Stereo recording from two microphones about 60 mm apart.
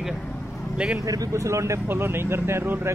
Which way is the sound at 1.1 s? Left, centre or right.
Right.